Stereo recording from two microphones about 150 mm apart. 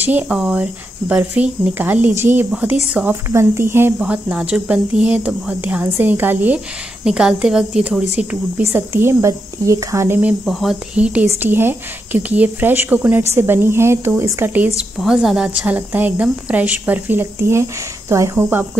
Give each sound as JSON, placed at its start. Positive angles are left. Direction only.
{"t": 0.0, "sound": "a woman's voice", "side_deg": -10}
{"t": 10.4, "sound": "a woman's voice", "side_deg": 0}